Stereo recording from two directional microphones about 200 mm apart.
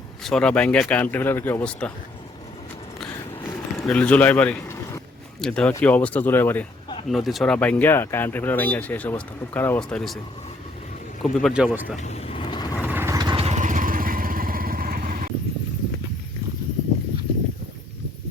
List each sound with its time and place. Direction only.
0.3 s speech: 5° left (ahead or behind)
3.8 s speech: 5° left (ahead or behind)
7.1 s speech: centre (ahead or behind)
11.2 s speech: centre (ahead or behind)
12.0 s vehicle: 30° left (ahead or behind)
12.8 s vehicle: 10° right (ahead or behind); by 15.3 s 45° right (ahead or behind)